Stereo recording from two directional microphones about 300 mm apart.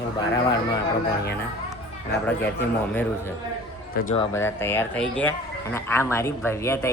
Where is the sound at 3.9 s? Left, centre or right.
Left.